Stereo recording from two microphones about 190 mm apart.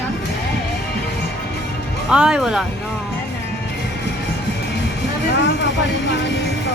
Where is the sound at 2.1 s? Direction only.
5° right (ahead or behind).